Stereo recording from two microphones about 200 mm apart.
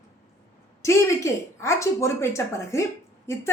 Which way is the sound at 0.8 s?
15° left (ahead or behind).